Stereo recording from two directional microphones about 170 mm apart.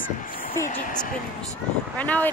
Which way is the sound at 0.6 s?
50° left (ahead or behind).